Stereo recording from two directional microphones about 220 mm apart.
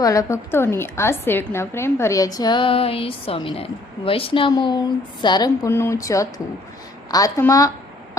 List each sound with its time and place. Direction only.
0.0 s a woman's voice: 15° left (ahead or behind)